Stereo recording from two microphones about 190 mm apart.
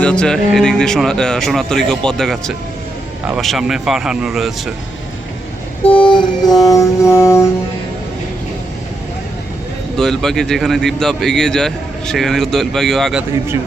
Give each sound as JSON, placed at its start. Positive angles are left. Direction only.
{"t": 0.0, "sound": "a man's voice", "side_deg": 5}
{"t": 5.8, "sound": "mantra", "side_deg": 25}
{"t": 10.0, "sound": "a man's voice", "side_deg": 0}